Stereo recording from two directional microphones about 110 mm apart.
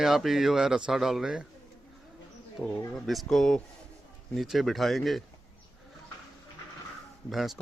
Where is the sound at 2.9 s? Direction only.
Centre (ahead or behind).